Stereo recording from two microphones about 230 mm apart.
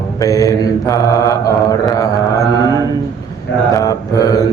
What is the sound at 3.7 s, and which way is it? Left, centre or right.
Mantra, centre.